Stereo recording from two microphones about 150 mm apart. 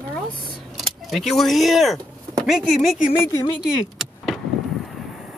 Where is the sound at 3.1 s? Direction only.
15° left (ahead or behind).